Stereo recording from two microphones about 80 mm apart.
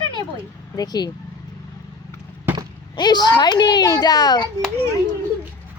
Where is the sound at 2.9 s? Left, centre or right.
Left.